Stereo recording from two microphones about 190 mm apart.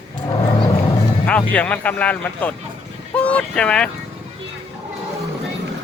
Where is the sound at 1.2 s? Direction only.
5° left (ahead or behind).